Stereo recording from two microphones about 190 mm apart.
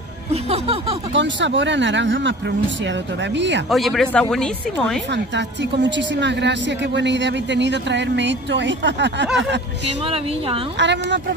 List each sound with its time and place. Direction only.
0.3 s music: 30° right (ahead or behind)
1.1 s a woman's voice: 70° right (ahead or behind)
3.7 s speech: centre (ahead or behind)
5.1 s a woman's voice: 70° right (ahead or behind)
10.0 s speech: 30° right (ahead or behind)
10.8 s a woman's voice: 65° right (ahead or behind)